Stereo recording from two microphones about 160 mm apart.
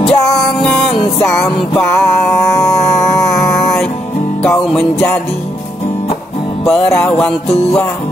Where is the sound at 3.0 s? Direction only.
Centre (ahead or behind).